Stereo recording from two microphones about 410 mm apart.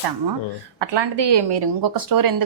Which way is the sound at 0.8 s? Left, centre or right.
Right.